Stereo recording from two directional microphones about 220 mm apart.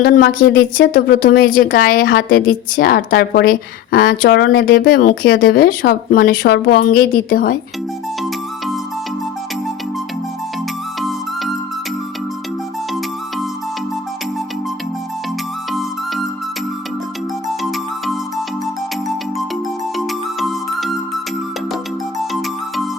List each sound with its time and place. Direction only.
0.0 s a woman's voice: 40° left (ahead or behind)
17.6 s music: centre (ahead or behind)
20.0 s music: centre (ahead or behind)